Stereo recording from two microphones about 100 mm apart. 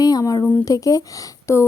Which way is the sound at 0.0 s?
40° left (ahead or behind).